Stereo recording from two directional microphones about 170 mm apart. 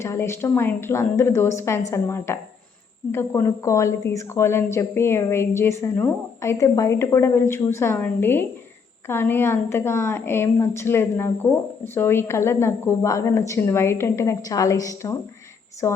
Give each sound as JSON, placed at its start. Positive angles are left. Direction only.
{"t": 0.0, "sound": "a woman's voice", "side_deg": 15}